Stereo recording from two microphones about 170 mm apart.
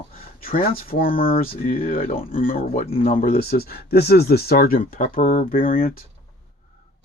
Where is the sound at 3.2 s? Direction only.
65° left (ahead or behind).